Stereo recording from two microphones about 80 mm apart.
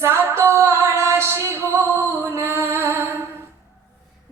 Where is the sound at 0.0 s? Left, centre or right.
Right.